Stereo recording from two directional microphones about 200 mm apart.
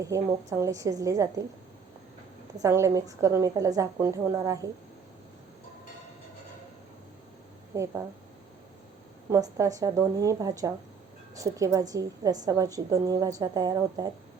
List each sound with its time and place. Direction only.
0.0 s a woman's voice: 15° right (ahead or behind)
2.6 s a woman's voice: 15° right (ahead or behind)
7.7 s a woman's voice: 15° right (ahead or behind)
9.3 s a woman's voice: 15° right (ahead or behind)